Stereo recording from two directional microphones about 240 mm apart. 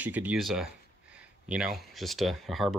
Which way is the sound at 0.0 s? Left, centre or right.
Centre.